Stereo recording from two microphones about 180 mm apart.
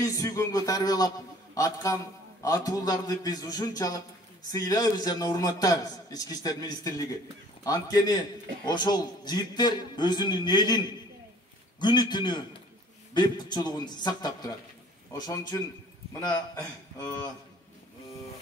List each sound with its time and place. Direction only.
0.0 s a man's voice: 15° left (ahead or behind)